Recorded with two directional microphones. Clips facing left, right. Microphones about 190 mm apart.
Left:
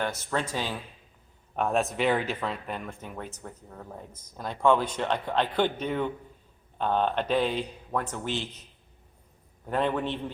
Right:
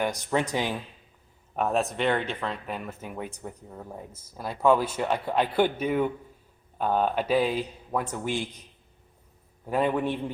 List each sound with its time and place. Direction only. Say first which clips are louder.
0.0 s speech: right 3 dB; 15° right (ahead or behind)
1.5 s speech: even; centre (ahead or behind)
9.6 s speech: right 2 dB; 10° right (ahead or behind)